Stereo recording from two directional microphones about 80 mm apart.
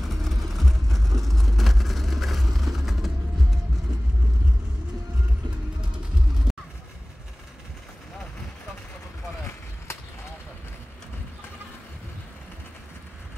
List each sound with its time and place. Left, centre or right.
0.0 s vehicle: centre
6.5 s music: centre
9.9 s vehicle: left